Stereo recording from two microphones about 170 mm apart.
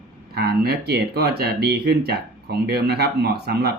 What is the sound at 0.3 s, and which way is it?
Speech, 65° right (ahead or behind).